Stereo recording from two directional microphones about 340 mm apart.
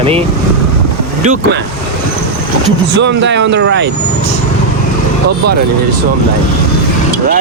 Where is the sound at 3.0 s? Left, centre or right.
Right.